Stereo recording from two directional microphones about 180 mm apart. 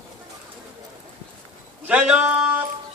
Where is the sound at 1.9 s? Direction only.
5° right (ahead or behind).